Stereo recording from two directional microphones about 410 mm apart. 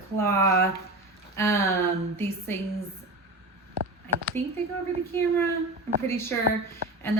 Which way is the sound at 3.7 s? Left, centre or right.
Right.